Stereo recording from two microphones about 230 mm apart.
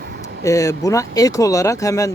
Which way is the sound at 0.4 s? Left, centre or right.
Centre.